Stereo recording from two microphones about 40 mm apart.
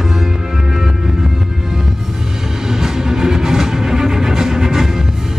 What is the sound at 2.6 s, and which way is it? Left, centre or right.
Music, centre.